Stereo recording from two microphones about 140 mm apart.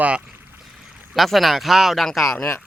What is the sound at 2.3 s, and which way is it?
Speech, 20° left (ahead or behind).